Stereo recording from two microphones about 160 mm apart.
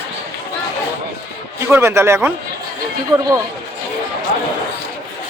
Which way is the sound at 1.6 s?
15° right (ahead or behind).